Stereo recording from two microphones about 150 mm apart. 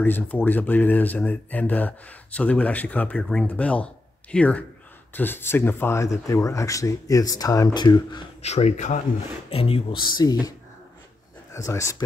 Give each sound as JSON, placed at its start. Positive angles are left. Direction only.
{"t": 0.0, "sound": "speech", "side_deg": 10}
{"t": 8.4, "sound": "speech", "side_deg": 45}
{"t": 9.5, "sound": "speech", "side_deg": 40}
{"t": 11.5, "sound": "speech", "side_deg": 20}